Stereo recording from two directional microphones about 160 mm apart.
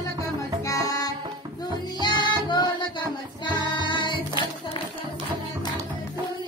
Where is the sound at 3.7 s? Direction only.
30° left (ahead or behind).